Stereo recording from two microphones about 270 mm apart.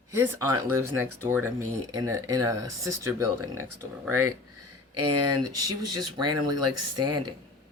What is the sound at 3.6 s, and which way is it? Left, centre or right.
Speech, right.